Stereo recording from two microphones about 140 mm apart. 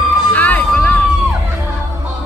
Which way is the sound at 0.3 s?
10° left (ahead or behind).